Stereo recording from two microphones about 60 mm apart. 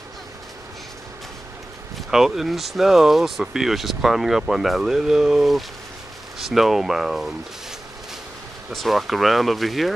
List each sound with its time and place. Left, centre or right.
2.0 s speech: centre
8.7 s speech: centre